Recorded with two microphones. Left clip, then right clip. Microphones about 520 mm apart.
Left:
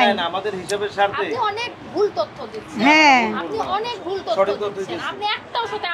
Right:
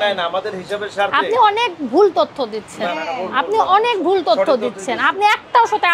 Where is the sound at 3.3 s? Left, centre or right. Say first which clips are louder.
Right 9 dB; right.